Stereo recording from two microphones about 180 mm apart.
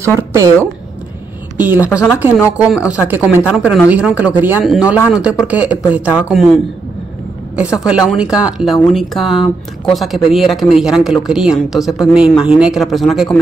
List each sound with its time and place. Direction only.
0.3 s speech: 15° right (ahead or behind); by 13.4 s centre (ahead or behind)